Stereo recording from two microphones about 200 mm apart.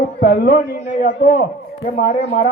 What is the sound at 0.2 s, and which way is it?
A man's voice, 45° left (ahead or behind).